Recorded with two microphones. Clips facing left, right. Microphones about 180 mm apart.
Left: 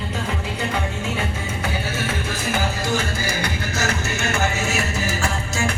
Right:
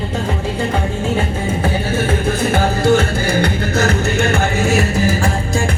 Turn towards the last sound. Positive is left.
turn(degrees=-55)  # may be behind; listen again after turning